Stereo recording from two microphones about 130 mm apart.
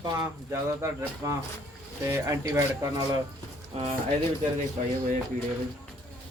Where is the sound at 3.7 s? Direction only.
50° right (ahead or behind).